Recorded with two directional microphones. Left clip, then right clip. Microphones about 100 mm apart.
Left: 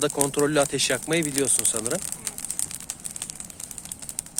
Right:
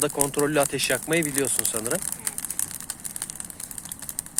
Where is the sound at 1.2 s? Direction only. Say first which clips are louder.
Left 1 dB; 15° left (ahead or behind).